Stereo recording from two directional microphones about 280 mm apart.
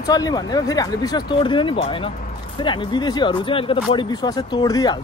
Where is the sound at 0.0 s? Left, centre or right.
Centre.